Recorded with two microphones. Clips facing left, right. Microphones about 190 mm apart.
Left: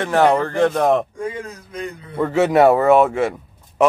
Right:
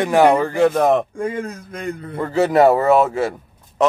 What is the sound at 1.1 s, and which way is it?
Speech, 50° right (ahead or behind).